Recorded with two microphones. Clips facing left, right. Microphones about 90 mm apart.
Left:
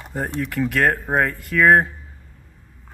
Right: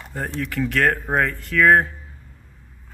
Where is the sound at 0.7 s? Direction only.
5° left (ahead or behind).